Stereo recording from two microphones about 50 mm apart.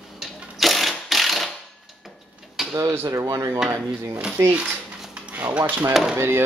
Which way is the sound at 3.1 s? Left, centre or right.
Right.